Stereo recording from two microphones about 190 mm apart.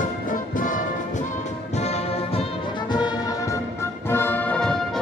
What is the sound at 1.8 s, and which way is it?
Music, 35° left (ahead or behind).